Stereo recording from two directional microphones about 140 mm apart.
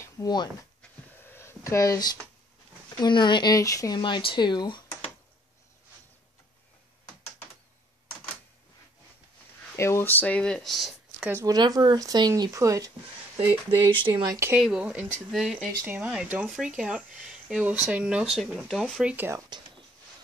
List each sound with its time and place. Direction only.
0.0 s a sound: 30° left (ahead or behind)
1.3 s a sound: 20° left (ahead or behind)
3.0 s speech: 35° left (ahead or behind)
9.8 s speech: 20° left (ahead or behind); by 11.2 s centre (ahead or behind)
11.4 s speech: 30° right (ahead or behind)
13.7 s speech: 35° right (ahead or behind)
14.1 s speech: 25° right (ahead or behind)
14.5 s speech: 10° right (ahead or behind)
19.0 s speech: 15° right (ahead or behind)